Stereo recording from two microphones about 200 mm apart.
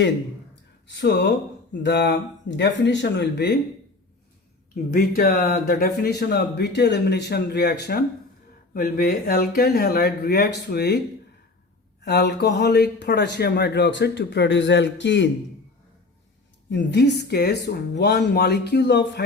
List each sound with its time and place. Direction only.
0.9 s speech: 60° left (ahead or behind)
4.7 s speech: 45° left (ahead or behind)
12.0 s speech: 55° left (ahead or behind)
16.6 s speech: 60° left (ahead or behind)